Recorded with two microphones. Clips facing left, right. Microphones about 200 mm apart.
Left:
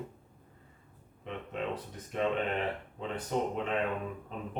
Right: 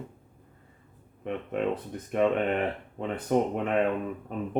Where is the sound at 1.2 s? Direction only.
55° right (ahead or behind).